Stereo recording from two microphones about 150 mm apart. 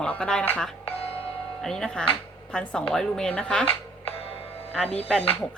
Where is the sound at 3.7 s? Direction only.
40° left (ahead or behind).